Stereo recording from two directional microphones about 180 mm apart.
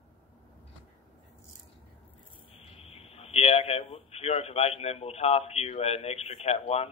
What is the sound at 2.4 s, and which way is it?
Speech, 30° left (ahead or behind).